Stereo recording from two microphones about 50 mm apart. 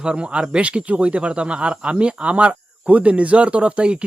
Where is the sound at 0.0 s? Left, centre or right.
Centre.